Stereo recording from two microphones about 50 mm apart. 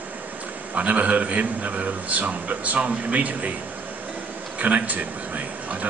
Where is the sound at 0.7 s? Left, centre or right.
Right.